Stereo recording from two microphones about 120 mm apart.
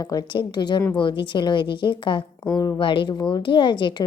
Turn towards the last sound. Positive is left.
turn(degrees=40)  # may be behind; listen again after turning